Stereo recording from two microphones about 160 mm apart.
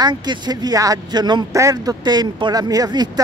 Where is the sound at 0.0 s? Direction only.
25° right (ahead or behind).